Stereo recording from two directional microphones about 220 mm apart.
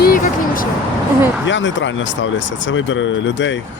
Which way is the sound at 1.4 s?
55° left (ahead or behind).